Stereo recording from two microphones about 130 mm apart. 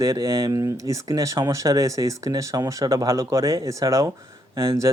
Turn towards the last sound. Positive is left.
turn(degrees=-25)  # may be behind; listen again after turning